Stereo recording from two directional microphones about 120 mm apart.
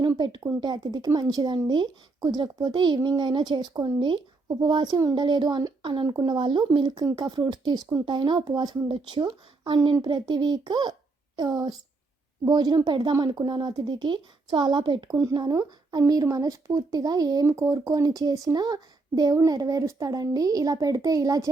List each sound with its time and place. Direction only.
0.0 s speech: 40° right (ahead or behind)